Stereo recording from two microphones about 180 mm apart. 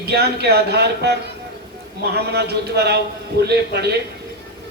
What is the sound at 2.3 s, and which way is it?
A man's voice, 65° right (ahead or behind).